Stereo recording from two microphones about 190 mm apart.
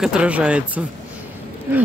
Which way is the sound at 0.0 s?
5° right (ahead or behind).